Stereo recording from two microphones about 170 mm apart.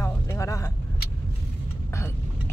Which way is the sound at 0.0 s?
15° left (ahead or behind).